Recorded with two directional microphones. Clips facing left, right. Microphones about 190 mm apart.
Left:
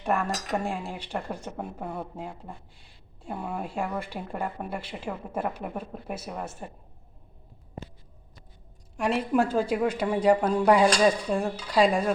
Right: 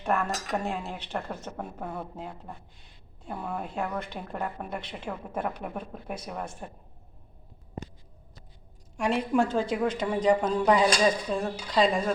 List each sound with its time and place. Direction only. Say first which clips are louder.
0.0 s speech: left 1 dB; 10° left (ahead or behind)
9.0 s speech: left 1 dB; centre (ahead or behind)